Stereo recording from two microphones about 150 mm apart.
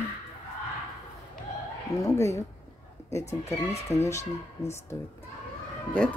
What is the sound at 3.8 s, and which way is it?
Speech, 45° left (ahead or behind).